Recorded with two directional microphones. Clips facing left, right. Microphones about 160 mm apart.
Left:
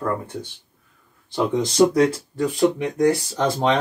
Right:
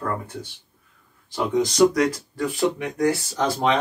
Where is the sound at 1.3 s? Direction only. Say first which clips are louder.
Left 1 dB; 30° left (ahead or behind).